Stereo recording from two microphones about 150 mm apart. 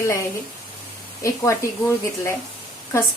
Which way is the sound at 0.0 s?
20° left (ahead or behind).